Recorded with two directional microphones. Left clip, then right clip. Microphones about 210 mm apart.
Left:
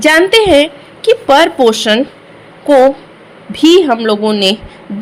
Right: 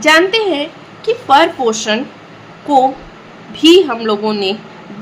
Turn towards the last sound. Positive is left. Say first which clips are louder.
# left 4 dB
turn(degrees=30)  # may be behind; listen again after turning